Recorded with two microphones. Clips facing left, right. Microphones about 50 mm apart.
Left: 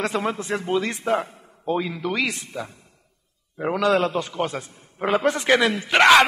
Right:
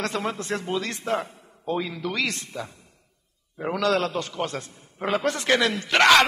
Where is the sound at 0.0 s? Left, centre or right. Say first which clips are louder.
Left 3 dB; centre.